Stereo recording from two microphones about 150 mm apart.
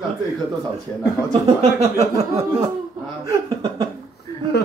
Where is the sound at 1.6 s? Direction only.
45° right (ahead or behind).